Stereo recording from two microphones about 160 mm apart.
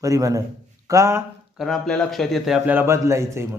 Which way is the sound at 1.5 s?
Centre (ahead or behind).